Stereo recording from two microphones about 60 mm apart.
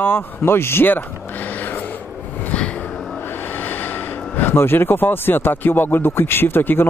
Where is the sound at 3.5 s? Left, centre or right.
Left.